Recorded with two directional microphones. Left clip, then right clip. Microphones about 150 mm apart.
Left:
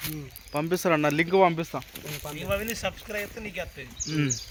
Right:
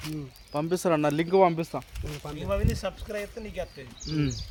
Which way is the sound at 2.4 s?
45° right (ahead or behind).